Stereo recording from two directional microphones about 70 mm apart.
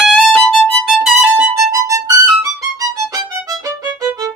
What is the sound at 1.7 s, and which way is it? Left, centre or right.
Music, right.